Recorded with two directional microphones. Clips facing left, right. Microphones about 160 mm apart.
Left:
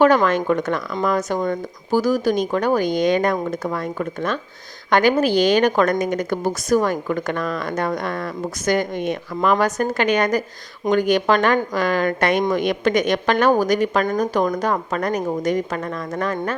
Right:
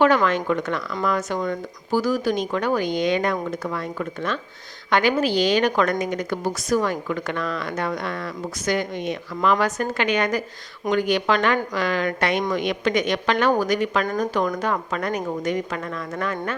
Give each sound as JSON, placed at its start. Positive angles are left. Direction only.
{"t": 0.0, "sound": "a woman's voice", "side_deg": 45}